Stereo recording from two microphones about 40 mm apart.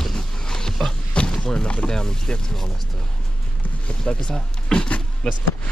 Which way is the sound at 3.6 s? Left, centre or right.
Left.